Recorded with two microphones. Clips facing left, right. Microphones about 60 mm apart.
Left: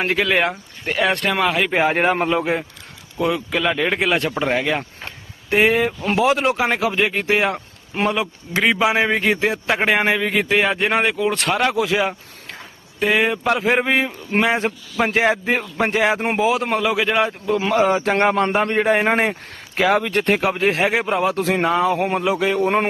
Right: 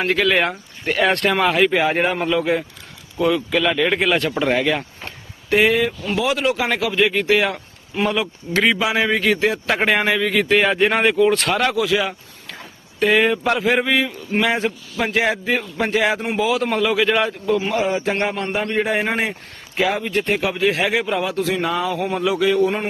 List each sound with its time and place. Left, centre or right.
0.1 s speech: centre
1.7 s a man's voice: left
2.0 s speech: left
3.2 s speech: centre
5.5 s a man's voice: left
9.6 s speech: centre
10.5 s speech: centre
11.7 s a man's voice: left
13.0 s speech: centre
13.6 s a man's voice: left
16.7 s speech: centre
17.7 s a man's voice: left
19.9 s speech: left
22.6 s a man's voice: left